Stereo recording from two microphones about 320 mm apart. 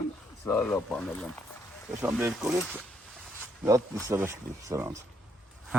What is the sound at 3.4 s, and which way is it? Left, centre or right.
Wild animals, centre.